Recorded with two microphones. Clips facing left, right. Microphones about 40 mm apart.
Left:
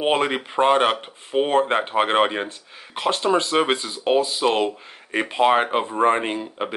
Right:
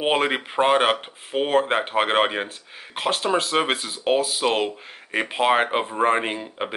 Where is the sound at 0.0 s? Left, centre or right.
Centre.